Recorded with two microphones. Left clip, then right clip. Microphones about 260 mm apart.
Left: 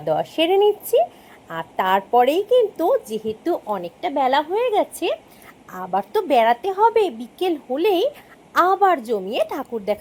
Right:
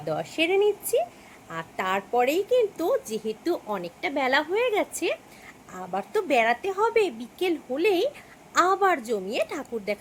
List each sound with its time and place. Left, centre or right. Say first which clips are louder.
0.0 s a woman's voice: left 7 dB; centre